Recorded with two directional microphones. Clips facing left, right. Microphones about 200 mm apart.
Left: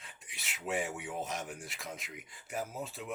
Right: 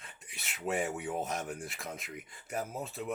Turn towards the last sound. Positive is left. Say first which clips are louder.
# right 2 dB
turn(degrees=-50)  # may be behind; listen again after turning